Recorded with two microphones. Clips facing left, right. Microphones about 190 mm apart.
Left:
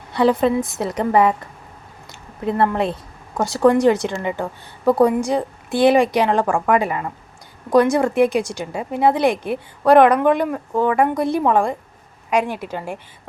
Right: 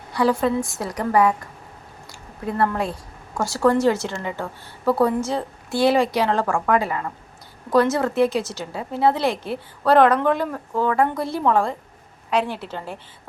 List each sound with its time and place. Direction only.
0.1 s a woman's voice: 20° left (ahead or behind)
2.4 s speech: 25° left (ahead or behind)